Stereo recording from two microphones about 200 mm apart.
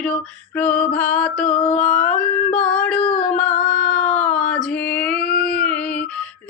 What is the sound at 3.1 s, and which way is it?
Female singing, 5° left (ahead or behind).